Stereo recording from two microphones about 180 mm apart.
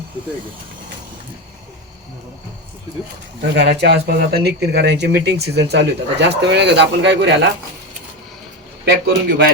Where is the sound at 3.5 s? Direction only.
70° right (ahead or behind).